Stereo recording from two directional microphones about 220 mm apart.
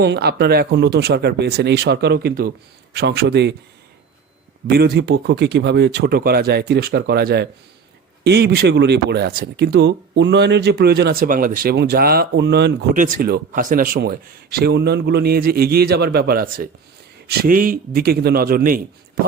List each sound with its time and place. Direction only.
0.0 s speech: 50° right (ahead or behind)
4.7 s speech: 45° right (ahead or behind)